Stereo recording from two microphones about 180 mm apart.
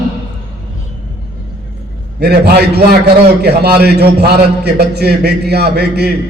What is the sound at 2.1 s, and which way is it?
A man's voice, 65° right (ahead or behind).